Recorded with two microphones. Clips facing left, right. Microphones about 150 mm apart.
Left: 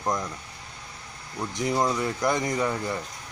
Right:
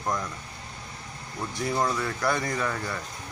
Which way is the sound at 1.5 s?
20° left (ahead or behind).